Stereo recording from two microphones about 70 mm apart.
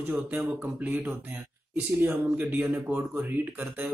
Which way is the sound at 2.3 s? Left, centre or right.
Right.